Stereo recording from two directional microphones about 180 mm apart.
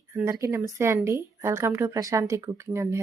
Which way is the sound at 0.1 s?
15° right (ahead or behind).